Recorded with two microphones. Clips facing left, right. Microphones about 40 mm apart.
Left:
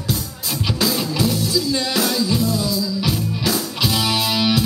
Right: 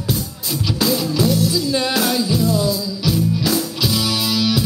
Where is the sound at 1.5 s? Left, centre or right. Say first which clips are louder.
Right 1 dB; centre.